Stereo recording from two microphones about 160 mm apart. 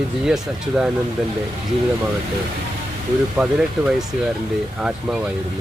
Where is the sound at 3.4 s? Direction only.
5° right (ahead or behind).